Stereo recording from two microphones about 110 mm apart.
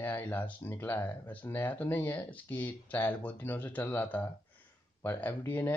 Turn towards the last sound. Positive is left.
turn(degrees=20)  # may be behind; listen again after turning